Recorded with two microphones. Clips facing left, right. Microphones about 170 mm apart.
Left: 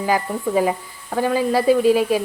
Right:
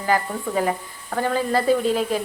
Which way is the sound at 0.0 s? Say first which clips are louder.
Left 2 dB; 15° left (ahead or behind).